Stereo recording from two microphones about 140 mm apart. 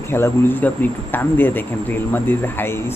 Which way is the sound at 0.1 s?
15° left (ahead or behind).